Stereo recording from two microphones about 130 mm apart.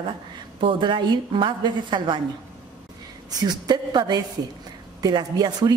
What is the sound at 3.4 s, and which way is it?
A woman's voice, 35° right (ahead or behind).